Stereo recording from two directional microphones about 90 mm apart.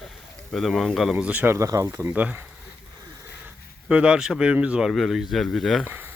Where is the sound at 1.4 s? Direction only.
35° right (ahead or behind).